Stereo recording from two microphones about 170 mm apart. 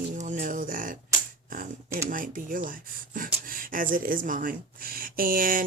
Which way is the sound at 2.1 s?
50° right (ahead or behind).